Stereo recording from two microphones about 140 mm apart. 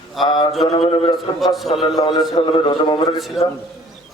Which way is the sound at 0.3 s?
30° left (ahead or behind).